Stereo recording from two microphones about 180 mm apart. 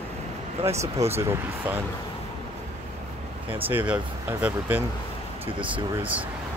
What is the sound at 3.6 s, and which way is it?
Speech, 10° right (ahead or behind).